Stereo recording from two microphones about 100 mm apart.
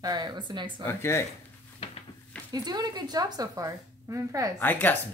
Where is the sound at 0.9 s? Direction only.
25° left (ahead or behind).